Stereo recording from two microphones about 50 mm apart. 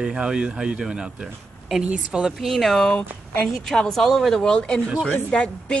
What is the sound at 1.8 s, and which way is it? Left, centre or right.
Speech, right.